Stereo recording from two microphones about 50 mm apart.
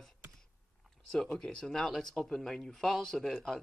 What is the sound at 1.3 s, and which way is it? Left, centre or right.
Speech, centre.